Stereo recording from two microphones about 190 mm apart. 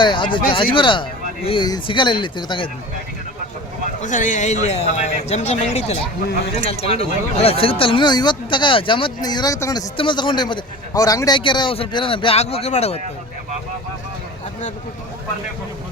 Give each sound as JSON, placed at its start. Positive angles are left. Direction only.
{"t": 0.0, "sound": "speech", "side_deg": 25}
{"t": 4.0, "sound": "speech", "side_deg": 40}